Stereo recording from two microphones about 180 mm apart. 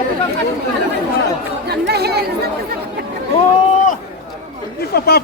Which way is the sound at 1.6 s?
65° right (ahead or behind).